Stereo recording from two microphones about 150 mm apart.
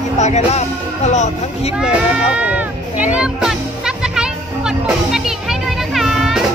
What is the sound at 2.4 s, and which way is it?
Music, 10° right (ahead or behind).